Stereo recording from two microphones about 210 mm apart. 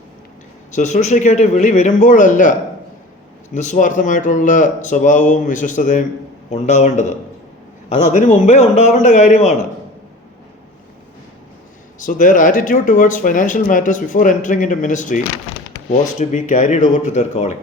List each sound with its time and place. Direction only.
0.7 s speech: 35° left (ahead or behind)
11.9 s speech: 40° left (ahead or behind)